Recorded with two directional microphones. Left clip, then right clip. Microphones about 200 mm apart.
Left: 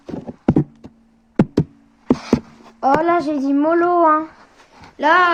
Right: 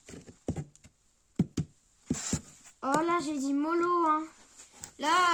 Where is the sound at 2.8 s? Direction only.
65° right (ahead or behind).